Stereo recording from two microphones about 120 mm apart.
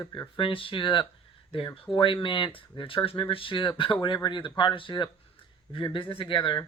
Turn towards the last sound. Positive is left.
turn(degrees=45)  # may be behind; listen again after turning